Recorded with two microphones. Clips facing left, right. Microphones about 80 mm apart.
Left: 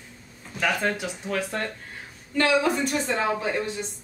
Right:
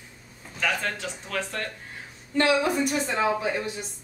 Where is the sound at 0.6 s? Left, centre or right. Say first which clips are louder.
Left 3 dB; centre.